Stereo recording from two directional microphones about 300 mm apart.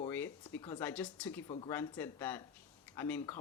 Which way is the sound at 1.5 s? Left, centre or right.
Centre.